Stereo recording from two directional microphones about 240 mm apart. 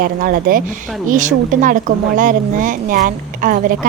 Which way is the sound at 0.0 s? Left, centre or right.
Right.